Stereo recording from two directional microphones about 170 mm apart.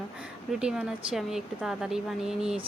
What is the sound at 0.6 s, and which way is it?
Speech, 5° right (ahead or behind).